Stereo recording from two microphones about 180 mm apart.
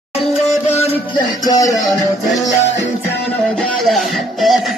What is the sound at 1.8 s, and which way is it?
Music, centre (ahead or behind).